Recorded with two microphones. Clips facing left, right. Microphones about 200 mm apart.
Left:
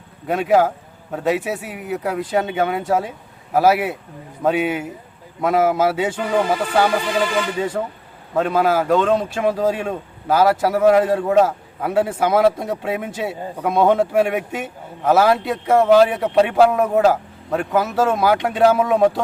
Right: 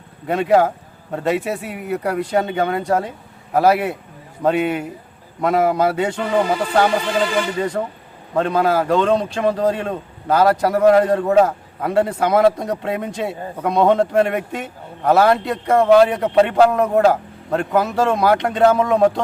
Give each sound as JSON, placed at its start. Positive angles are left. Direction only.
{"t": 0.3, "sound": "a man's voice", "side_deg": 0}